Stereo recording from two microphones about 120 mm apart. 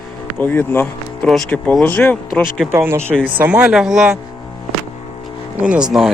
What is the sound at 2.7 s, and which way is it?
Speech, 20° right (ahead or behind).